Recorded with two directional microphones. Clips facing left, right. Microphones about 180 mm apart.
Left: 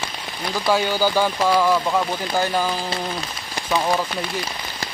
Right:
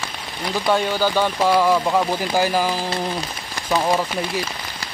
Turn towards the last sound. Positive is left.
turn(degrees=-20)  # may be behind; listen again after turning